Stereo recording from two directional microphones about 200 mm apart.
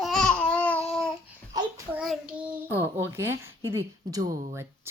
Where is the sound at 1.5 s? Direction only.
15° right (ahead or behind).